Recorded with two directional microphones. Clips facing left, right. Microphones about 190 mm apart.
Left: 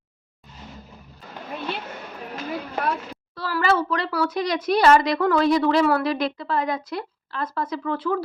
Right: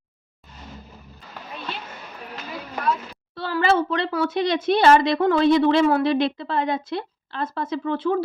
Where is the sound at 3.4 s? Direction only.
25° right (ahead or behind).